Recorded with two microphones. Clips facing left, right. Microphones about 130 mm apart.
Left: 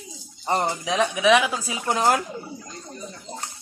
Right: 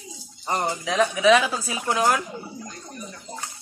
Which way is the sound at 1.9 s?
30° left (ahead or behind).